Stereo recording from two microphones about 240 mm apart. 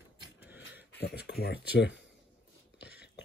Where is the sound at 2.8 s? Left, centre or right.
Left.